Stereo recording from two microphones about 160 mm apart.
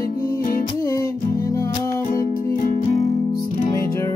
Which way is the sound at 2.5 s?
55° left (ahead or behind).